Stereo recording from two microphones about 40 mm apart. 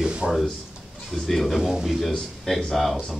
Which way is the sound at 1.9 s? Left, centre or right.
Centre.